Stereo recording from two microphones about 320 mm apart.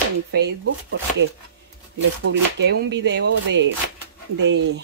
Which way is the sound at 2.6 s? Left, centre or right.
Right.